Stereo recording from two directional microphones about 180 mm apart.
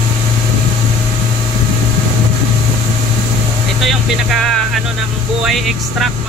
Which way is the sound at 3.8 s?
Centre (ahead or behind).